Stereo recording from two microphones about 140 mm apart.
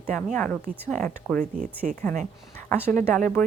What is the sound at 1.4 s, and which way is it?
Speech, 70° right (ahead or behind).